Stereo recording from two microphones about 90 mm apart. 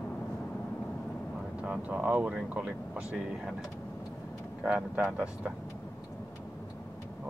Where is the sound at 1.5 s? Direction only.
15° right (ahead or behind).